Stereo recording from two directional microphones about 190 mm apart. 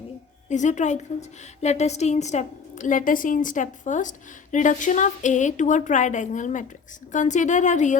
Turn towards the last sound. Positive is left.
turn(degrees=40)  # may be behind; listen again after turning